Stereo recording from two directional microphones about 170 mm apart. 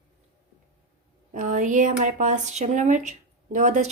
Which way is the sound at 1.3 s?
50° right (ahead or behind).